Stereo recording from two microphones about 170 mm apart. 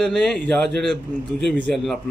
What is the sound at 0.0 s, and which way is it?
A man's voice, 5° left (ahead or behind).